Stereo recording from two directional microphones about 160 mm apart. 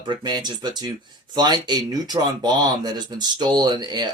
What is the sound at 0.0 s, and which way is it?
Speech, 30° right (ahead or behind).